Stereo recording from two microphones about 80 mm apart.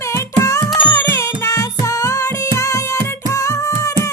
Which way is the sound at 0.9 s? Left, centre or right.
Left.